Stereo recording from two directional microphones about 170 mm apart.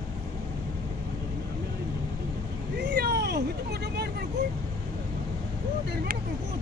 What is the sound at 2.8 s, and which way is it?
Vehicle, 75° right (ahead or behind).